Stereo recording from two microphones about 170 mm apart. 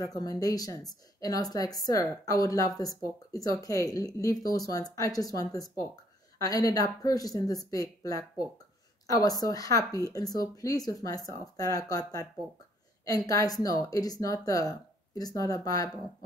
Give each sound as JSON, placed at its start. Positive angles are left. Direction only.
{"t": 0.0, "sound": "speech", "side_deg": 20}